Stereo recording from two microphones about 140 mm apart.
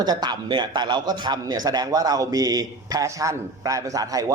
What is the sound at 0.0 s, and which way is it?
A man's voice, 30° right (ahead or behind).